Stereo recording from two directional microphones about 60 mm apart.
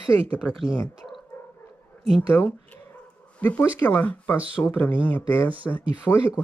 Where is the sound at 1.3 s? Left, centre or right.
Left.